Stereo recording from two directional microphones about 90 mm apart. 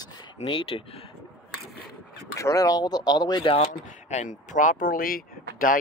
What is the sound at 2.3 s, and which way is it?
Speech, 40° left (ahead or behind).